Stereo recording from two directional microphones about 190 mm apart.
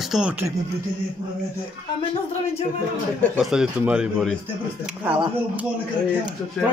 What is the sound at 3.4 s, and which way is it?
Speech, 5° right (ahead or behind).